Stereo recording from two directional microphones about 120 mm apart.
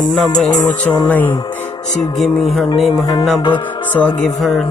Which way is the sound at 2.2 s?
Centre (ahead or behind).